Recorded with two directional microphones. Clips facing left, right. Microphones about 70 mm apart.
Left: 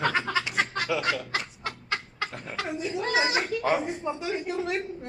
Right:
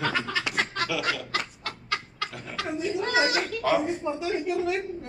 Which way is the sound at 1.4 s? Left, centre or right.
Right.